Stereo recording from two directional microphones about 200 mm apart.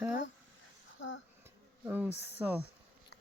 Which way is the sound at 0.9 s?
75° left (ahead or behind).